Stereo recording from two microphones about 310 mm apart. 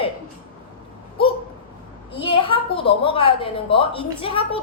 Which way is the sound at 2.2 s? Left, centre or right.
Centre.